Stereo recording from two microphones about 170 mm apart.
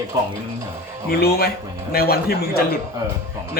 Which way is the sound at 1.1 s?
65° left (ahead or behind).